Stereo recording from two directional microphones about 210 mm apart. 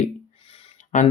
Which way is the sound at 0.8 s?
35° left (ahead or behind).